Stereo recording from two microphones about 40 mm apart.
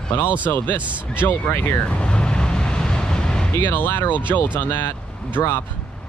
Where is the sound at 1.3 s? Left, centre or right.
Left.